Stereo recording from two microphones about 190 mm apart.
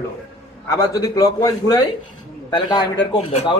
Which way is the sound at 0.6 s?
20° left (ahead or behind).